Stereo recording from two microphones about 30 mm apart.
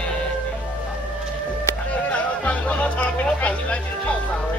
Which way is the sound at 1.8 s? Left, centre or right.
Left.